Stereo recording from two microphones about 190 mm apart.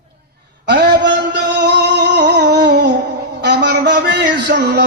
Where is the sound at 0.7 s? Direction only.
65° right (ahead or behind).